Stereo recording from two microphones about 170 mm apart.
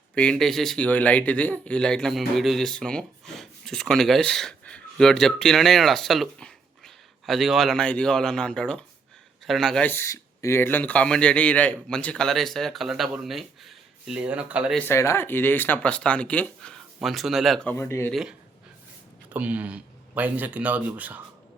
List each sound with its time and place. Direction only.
0.1 s speech: 5° left (ahead or behind)
14.8 s speech: 15° left (ahead or behind)
17.7 s speech: 15° left (ahead or behind)
18.1 s speech: centre (ahead or behind)